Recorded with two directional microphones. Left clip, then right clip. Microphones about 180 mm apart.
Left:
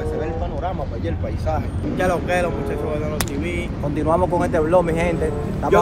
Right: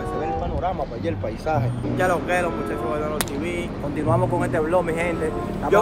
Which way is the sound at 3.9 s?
Centre (ahead or behind).